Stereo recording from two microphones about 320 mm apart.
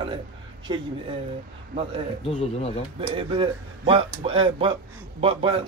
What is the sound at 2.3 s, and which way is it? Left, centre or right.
Speech, centre.